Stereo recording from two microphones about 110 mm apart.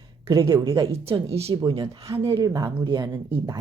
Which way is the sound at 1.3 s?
70° right (ahead or behind).